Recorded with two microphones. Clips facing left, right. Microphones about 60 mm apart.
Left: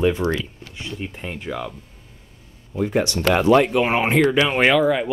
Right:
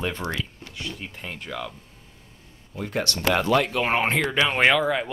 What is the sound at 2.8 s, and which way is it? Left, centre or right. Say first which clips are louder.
Speech: left 6 dB; centre.